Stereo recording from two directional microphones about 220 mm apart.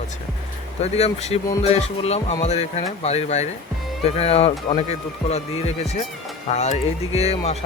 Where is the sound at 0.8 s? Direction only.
30° left (ahead or behind).